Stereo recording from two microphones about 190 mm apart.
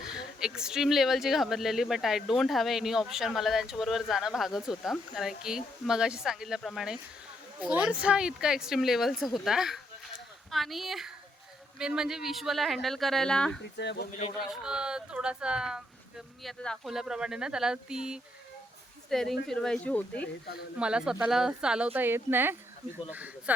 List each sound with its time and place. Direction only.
0.0 s speech: 5° right (ahead or behind)
13.6 s speech: 65° left (ahead or behind)
14.4 s speech: 5° right (ahead or behind)
20.7 s speech: 5° right (ahead or behind)